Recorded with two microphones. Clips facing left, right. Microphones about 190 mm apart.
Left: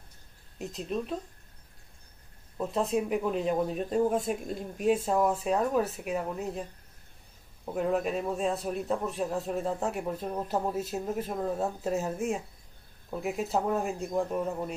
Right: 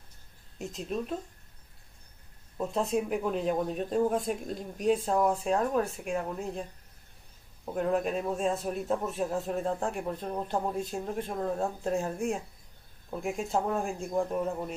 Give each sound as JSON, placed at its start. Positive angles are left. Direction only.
{"t": 0.6, "sound": "a man's voice", "side_deg": 0}
{"t": 2.5, "sound": "a man's voice", "side_deg": 0}